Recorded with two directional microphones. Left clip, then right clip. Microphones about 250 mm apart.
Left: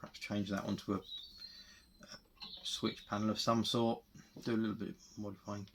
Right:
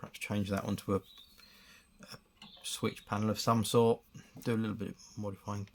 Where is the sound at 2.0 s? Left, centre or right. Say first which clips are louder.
Right 3 dB; right.